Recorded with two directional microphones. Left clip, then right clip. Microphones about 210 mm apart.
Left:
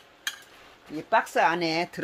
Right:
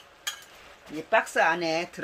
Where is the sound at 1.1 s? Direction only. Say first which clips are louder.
Even; 35° left (ahead or behind).